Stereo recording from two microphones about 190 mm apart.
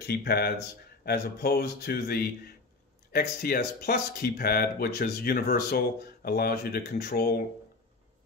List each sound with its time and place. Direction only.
0.0 s speech: 60° left (ahead or behind)